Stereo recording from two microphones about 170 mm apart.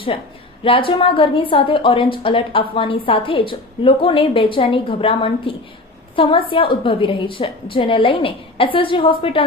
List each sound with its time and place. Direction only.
0.6 s a woman's voice: 30° left (ahead or behind)